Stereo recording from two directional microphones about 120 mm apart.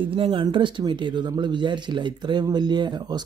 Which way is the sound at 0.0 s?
45° right (ahead or behind).